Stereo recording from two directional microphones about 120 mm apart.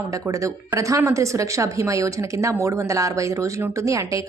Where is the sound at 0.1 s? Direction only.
25° right (ahead or behind).